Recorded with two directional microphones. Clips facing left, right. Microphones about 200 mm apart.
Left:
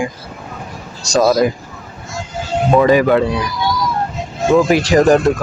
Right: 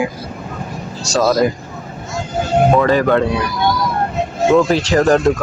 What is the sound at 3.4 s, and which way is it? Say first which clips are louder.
Vehicle: right 1 dB; 60° right (ahead or behind).